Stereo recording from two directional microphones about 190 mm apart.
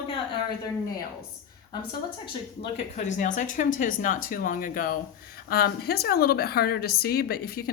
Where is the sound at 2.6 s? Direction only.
35° left (ahead or behind).